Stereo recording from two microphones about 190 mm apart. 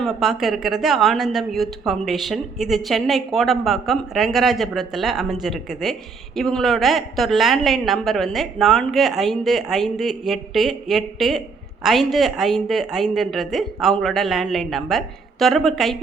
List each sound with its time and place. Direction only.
0.0 s speech: centre (ahead or behind)